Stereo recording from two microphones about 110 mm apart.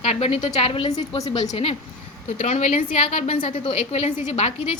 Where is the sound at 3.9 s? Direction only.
80° left.